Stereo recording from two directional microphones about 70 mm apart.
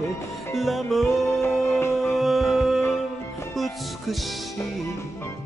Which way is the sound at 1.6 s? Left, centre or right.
Left.